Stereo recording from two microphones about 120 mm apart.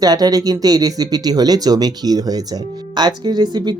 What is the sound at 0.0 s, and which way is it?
Speech, 30° right (ahead or behind).